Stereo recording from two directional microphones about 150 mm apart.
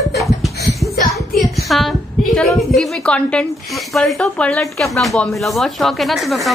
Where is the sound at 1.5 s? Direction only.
Centre (ahead or behind).